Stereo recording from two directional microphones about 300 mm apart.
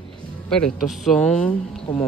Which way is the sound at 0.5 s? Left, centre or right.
Centre.